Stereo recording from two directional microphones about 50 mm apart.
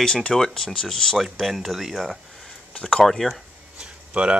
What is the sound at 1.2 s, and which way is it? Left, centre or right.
Speech, centre.